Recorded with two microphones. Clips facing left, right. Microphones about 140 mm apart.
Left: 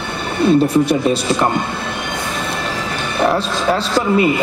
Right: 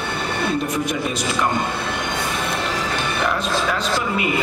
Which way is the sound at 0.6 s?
30° left (ahead or behind).